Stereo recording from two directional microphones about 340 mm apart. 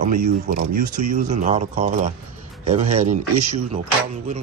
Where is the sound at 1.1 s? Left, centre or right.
Right.